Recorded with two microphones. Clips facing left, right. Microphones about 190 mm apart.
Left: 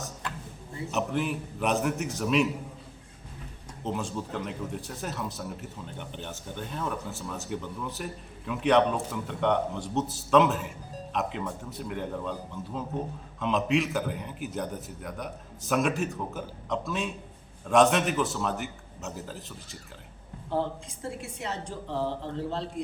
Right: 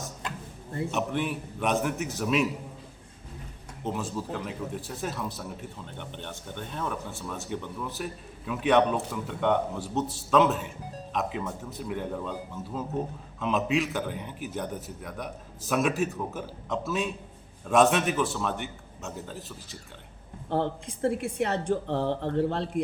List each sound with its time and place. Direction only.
0.9 s a man's voice: centre (ahead or behind)
3.8 s a man's voice: centre (ahead or behind)
20.5 s speech: 60° right (ahead or behind)